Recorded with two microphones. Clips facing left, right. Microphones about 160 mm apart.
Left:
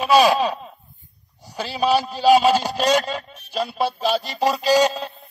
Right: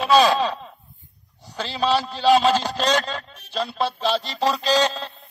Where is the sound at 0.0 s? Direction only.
15° left (ahead or behind).